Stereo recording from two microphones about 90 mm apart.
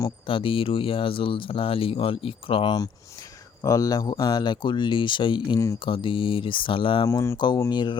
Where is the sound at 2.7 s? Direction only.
45° left (ahead or behind); by 7.1 s 70° left (ahead or behind).